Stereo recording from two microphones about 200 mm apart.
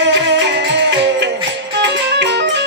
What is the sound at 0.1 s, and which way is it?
Music, 60° right (ahead or behind).